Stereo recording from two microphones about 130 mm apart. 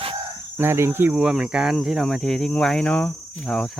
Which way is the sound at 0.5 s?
20° right (ahead or behind).